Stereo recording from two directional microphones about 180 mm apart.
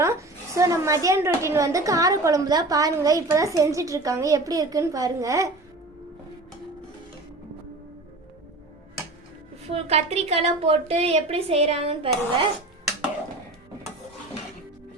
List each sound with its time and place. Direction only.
0.0 s a woman's voice: 15° right (ahead or behind)
9.6 s a woman's voice: 35° right (ahead or behind)